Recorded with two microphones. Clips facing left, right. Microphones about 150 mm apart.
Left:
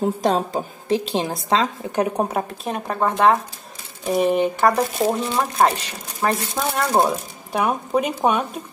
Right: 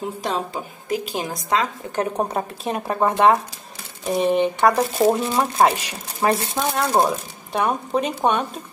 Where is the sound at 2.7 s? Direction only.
10° right (ahead or behind).